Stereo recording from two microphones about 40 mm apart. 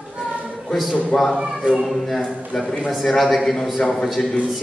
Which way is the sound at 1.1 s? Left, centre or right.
Left.